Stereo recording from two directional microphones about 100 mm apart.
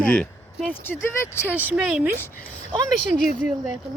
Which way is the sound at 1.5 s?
20° right (ahead or behind).